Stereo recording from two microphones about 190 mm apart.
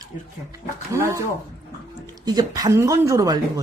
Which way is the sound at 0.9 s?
15° right (ahead or behind).